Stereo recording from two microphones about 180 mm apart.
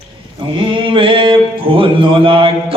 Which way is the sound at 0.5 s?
30° right (ahead or behind).